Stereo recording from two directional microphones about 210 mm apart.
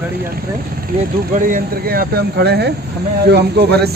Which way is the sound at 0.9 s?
40° right (ahead or behind).